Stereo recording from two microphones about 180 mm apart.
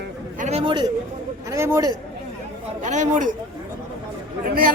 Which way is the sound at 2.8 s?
40° right (ahead or behind).